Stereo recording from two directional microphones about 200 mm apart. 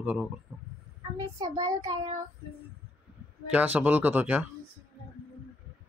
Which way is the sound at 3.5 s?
10° right (ahead or behind).